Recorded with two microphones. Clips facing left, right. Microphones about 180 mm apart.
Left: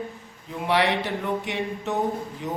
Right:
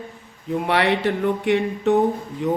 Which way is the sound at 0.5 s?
60° right (ahead or behind).